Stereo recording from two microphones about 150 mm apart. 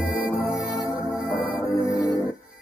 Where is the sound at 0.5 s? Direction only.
10° right (ahead or behind).